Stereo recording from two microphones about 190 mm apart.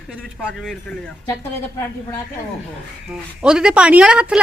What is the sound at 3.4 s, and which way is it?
Speech, 5° right (ahead or behind).